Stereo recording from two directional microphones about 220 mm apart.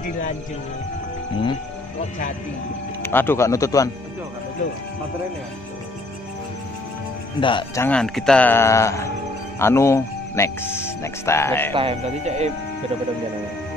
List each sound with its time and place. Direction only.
2.0 s speech: 35° left (ahead or behind)
3.0 s speech: 10° left (ahead or behind)
7.3 s speech: 20° left (ahead or behind)
7.8 s speech: 5° left (ahead or behind)
11.7 s speech: 25° right (ahead or behind)